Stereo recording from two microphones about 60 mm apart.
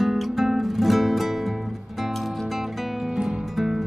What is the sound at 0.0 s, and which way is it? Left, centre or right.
Music, centre.